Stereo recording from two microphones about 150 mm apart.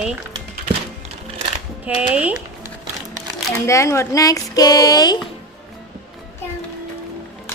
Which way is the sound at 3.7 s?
20° left (ahead or behind).